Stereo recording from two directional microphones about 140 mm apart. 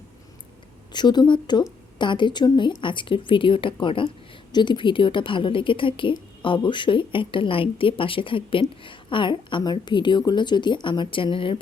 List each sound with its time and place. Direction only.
0.9 s a woman's voice: 30° left (ahead or behind)